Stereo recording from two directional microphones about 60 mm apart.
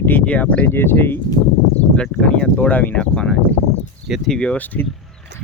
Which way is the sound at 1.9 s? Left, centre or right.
Centre.